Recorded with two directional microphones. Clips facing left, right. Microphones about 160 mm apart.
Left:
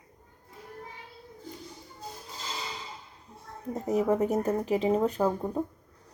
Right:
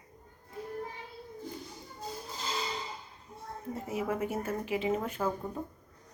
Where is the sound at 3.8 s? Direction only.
40° left (ahead or behind).